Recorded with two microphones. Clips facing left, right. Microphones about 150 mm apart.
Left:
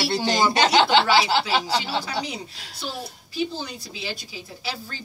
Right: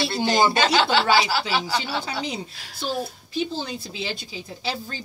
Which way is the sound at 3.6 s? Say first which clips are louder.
Right 4 dB; 25° right (ahead or behind).